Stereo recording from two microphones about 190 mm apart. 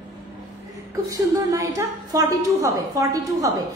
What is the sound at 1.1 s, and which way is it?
A woman's voice, 15° right (ahead or behind).